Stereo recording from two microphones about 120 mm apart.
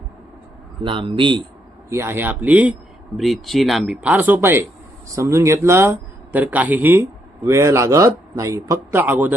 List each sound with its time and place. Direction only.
0.8 s speech: 40° right (ahead or behind)
1.9 s speech: 20° right (ahead or behind)
3.2 s speech: centre (ahead or behind); by 9.0 s 25° right (ahead or behind)
9.0 s speech: 15° right (ahead or behind)